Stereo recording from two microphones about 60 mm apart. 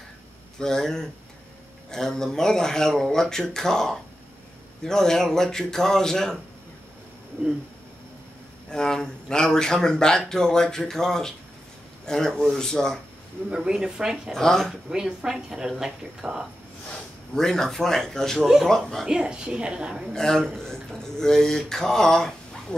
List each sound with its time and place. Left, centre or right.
0.6 s speech: centre
8.6 s speech: centre
13.5 s speech: centre
14.3 s speech: centre
14.9 s speech: centre
17.4 s speech: centre
19.0 s speech: centre
20.1 s speech: centre